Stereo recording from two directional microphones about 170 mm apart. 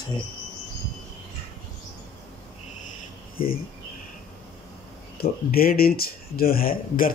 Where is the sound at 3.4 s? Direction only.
60° left (ahead or behind).